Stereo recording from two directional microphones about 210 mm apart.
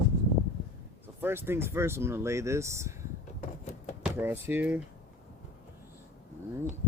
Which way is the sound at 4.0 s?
10° right (ahead or behind).